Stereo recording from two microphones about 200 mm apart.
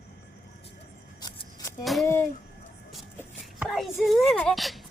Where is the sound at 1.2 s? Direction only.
20° left (ahead or behind).